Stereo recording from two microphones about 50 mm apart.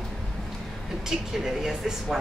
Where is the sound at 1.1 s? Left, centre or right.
Centre.